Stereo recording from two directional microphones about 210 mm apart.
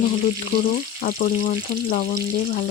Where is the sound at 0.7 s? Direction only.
40° left (ahead or behind).